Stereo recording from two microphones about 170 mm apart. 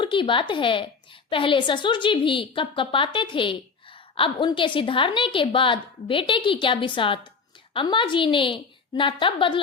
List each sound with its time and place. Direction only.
0.0 s a woman's voice: 30° left (ahead or behind)